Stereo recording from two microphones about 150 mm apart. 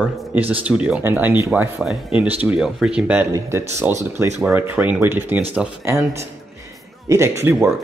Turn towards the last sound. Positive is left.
turn(degrees=-20)  # may be behind; listen again after turning